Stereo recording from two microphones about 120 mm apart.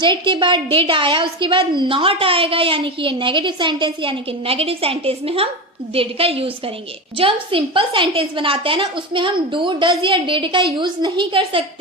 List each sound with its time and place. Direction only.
0.0 s a woman's voice: 40° right (ahead or behind)